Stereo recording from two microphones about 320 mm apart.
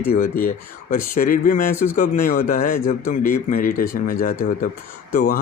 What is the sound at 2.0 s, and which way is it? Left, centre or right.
Speech, left.